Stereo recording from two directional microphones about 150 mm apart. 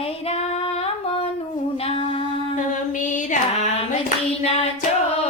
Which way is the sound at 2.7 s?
55° left (ahead or behind).